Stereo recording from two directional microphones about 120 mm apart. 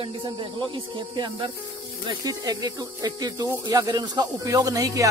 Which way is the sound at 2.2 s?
30° right (ahead or behind).